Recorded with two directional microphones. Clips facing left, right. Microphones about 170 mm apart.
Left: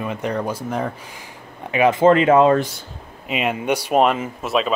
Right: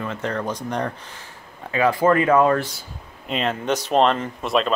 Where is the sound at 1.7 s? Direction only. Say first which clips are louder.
Left 4 dB; 20° left (ahead or behind).